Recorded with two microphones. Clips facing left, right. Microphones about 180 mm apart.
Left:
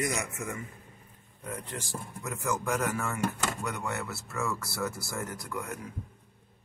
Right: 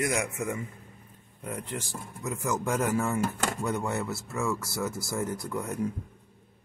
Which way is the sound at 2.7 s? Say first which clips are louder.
Right 4 dB; 25° right (ahead or behind).